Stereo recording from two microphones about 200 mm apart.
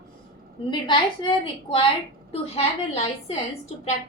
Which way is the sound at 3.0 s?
30° left (ahead or behind).